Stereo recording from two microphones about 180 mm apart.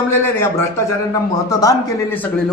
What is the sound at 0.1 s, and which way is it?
Speech, 10° left (ahead or behind).